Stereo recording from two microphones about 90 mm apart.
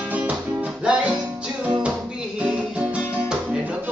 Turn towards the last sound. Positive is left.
turn(degrees=-15)  # may be behind; listen again after turning